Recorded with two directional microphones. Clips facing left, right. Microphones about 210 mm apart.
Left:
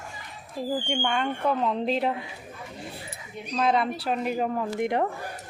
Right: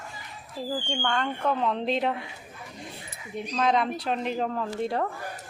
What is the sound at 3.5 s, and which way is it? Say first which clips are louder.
A woman's voice: left 1 dB; 5° left (ahead or behind).